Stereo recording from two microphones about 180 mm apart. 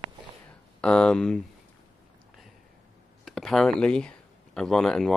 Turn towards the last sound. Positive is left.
turn(degrees=5)  # may be behind; listen again after turning